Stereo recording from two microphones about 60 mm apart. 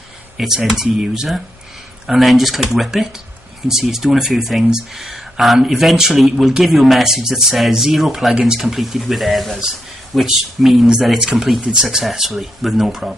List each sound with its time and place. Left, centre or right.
0.4 s speech: centre